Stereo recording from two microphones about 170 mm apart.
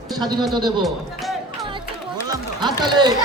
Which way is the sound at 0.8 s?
Centre (ahead or behind).